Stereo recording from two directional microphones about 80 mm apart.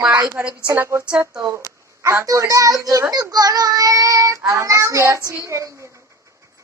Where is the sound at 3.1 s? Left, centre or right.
Right.